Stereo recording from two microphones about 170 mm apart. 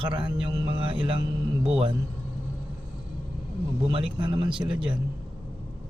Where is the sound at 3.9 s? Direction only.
30° right (ahead or behind).